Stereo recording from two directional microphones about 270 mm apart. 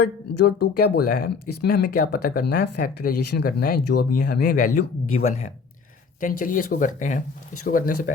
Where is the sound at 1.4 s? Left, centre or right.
Left.